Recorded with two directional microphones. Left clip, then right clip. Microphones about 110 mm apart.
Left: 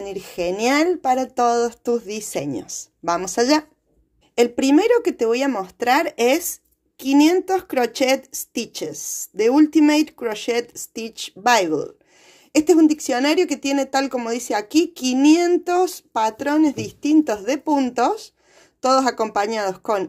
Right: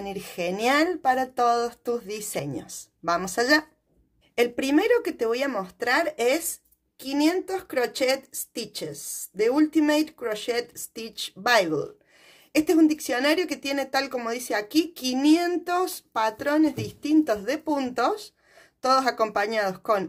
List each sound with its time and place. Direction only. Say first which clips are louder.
0.0 s speech: left 5 dB; 35° left (ahead or behind)